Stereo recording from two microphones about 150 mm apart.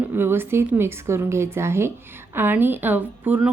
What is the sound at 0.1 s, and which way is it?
Speech, 15° right (ahead or behind).